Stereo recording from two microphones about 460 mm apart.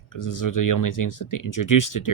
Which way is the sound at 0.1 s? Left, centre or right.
Left.